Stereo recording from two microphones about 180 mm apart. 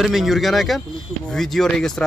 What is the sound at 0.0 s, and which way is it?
Speech, centre (ahead or behind).